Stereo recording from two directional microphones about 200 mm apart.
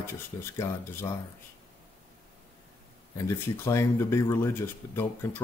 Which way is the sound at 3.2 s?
15° left (ahead or behind).